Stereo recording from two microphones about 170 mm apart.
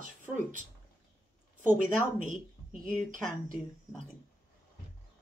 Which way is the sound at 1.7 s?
50° right (ahead or behind).